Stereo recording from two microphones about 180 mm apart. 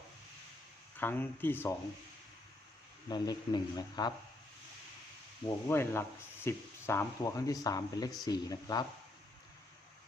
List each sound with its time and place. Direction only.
0.9 s speech: 10° left (ahead or behind)
3.1 s speech: 25° left (ahead or behind)
5.5 s speech: 15° left (ahead or behind)